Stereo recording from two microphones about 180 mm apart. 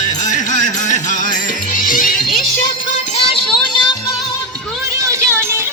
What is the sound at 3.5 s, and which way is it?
Music, 25° left (ahead or behind).